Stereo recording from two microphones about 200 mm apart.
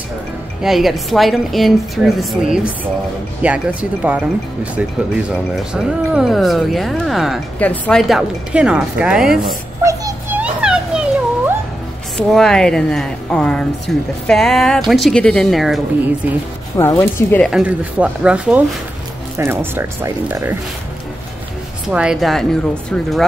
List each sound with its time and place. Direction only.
0.6 s speech: centre (ahead or behind)
5.3 s speech: 5° right (ahead or behind)
9.8 s a sound: 10° right (ahead or behind)
12.2 s speech: centre (ahead or behind)
16.7 s speech: 10° left (ahead or behind); by 20.5 s 10° right (ahead or behind)
21.8 s speech: 5° right (ahead or behind)